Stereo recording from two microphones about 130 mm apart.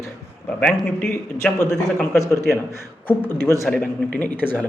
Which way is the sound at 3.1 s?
15° left (ahead or behind).